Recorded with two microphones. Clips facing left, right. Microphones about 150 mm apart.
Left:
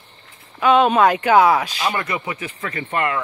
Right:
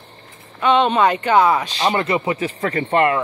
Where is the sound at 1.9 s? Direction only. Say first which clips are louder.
Right 6 dB; 30° right (ahead or behind).